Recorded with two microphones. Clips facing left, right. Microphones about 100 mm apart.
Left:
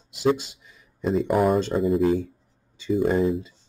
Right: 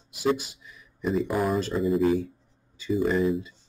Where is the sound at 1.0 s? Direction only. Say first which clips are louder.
Left 4 dB; 75° left (ahead or behind).